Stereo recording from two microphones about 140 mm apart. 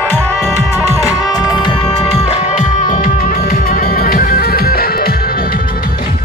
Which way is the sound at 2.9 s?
90° left.